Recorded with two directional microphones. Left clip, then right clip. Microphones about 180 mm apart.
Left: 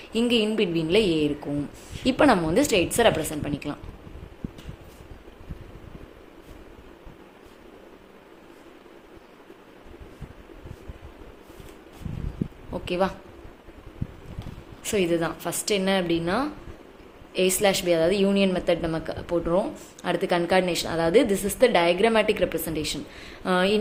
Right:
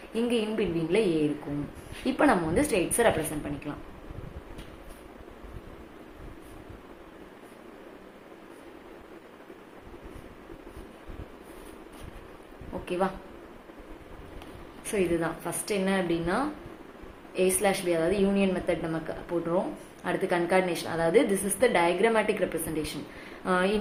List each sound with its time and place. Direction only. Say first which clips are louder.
0.1 s speech: left 5 dB; 40° left (ahead or behind)
2.0 s speech: left 4 dB; 40° left (ahead or behind)
12.8 s a sound: left 4 dB; 35° left (ahead or behind)
14.8 s speech: left 4 dB; 35° left (ahead or behind)